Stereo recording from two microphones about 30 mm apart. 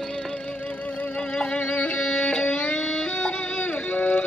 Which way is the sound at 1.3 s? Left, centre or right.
Left.